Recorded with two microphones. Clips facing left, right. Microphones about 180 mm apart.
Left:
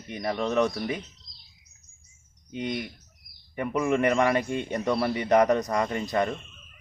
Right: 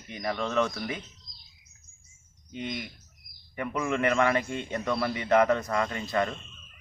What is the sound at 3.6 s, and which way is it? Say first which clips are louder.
A man's voice: left 4 dB; 15° left (ahead or behind).